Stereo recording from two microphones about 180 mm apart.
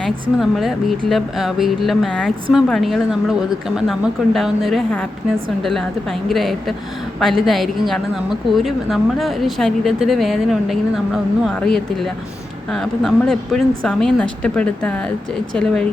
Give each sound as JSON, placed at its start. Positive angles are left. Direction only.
{"t": 0.0, "sound": "speech", "side_deg": 0}